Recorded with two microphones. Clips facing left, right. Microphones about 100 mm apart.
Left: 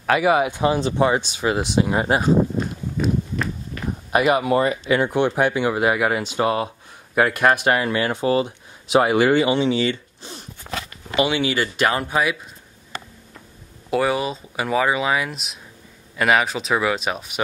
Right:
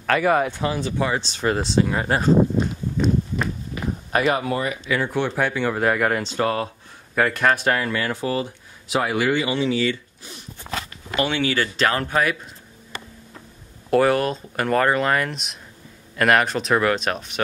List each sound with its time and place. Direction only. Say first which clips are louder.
0.0 s speech: left 1 dB; 10° left (ahead or behind)
1.2 s speech: left 1 dB; 5° left (ahead or behind)
2.5 s walk: right 2 dB; centre (ahead or behind)
3.8 s a sound: right 1 dB; 10° right (ahead or behind)
4.1 s speech: left 3 dB; 10° left (ahead or behind)
4.6 s speech: left 5 dB; 30° left (ahead or behind)
5.0 s speech: left 2 dB; 15° left (ahead or behind)
13.8 s speech: right 3 dB; centre (ahead or behind)